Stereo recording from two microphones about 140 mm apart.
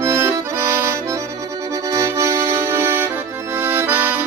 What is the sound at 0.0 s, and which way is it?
Accordion, 20° right (ahead or behind).